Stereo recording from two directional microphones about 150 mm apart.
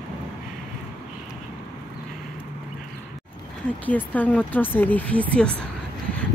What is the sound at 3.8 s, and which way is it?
Speech, 10° left (ahead or behind).